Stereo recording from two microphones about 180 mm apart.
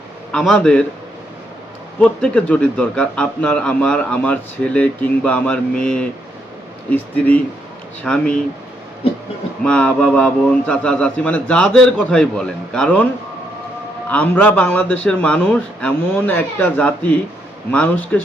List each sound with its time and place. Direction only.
0.3 s a man's voice: 5° left (ahead or behind)
2.0 s a man's voice: 5° left (ahead or behind)
9.6 s a man's voice: 5° left (ahead or behind)
14.1 s speech: 10° left (ahead or behind)